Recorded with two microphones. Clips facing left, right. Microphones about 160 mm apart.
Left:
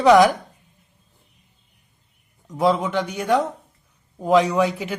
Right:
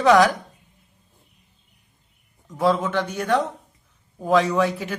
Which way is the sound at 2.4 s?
20° left (ahead or behind).